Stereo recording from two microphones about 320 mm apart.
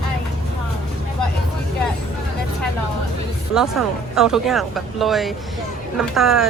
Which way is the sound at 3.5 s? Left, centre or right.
Centre.